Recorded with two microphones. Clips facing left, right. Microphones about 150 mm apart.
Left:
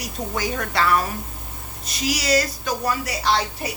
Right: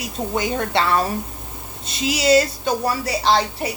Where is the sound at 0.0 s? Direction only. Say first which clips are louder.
Right 3 dB; 25° right (ahead or behind).